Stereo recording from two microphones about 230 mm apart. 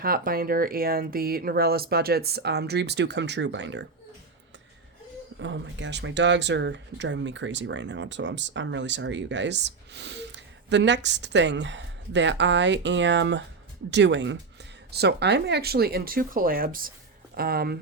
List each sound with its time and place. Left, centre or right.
0.0 s speech: right
5.4 s speech: right